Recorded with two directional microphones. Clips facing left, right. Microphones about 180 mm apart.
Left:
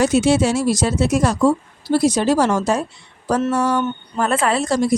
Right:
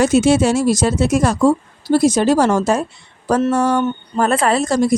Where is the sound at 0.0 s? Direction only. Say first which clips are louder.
Right 2 dB; 50° right (ahead or behind).